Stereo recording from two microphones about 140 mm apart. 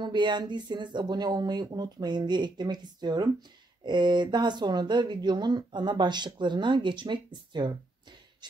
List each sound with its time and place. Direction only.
0.0 s speech: 35° right (ahead or behind)